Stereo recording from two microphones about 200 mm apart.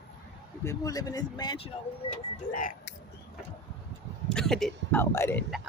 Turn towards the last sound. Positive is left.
turn(degrees=10)  # may be behind; listen again after turning